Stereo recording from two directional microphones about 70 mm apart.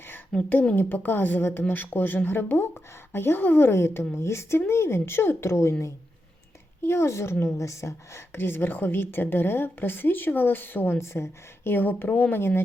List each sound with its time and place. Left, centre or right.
0.3 s speech: centre
0.8 s a woman's voice: left
6.8 s a woman's voice: left